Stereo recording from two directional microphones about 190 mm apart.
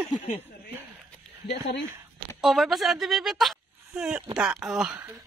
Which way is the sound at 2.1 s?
Centre (ahead or behind).